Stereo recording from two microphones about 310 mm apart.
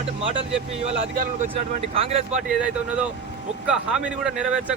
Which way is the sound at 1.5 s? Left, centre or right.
Centre.